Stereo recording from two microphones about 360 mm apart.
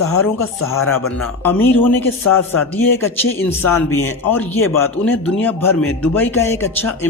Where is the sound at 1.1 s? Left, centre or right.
Centre.